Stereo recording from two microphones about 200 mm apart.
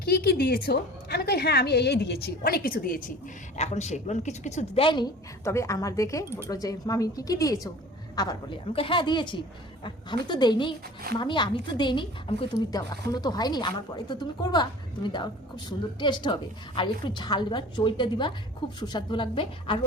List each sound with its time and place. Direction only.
0.0 s a woman's voice: 50° left (ahead or behind)
3.6 s a woman's voice: 35° left (ahead or behind)